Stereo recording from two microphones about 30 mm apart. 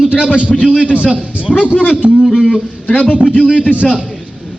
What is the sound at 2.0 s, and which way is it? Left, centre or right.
Speech, right.